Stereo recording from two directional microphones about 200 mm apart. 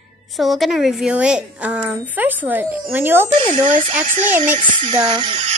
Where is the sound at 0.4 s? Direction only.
Centre (ahead or behind).